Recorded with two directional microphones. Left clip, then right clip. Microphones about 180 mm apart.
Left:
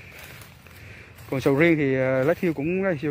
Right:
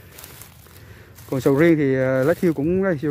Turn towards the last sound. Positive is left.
turn(degrees=-30)  # may be behind; listen again after turning